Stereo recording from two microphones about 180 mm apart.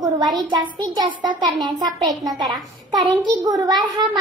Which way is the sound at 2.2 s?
Centre (ahead or behind).